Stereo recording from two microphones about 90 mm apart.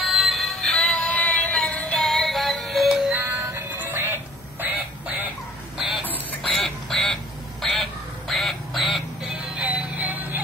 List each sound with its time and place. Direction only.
0.0 s synthetic singing: centre (ahead or behind)
3.3 s music: 30° right (ahead or behind)
3.7 s music: 20° right (ahead or behind)
4.0 s a sound: 25° right (ahead or behind)
5.8 s a sound: 5° right (ahead or behind)
6.4 s quack: 5° left (ahead or behind)
8.3 s music: centre (ahead or behind); by 10.4 s 20° right (ahead or behind)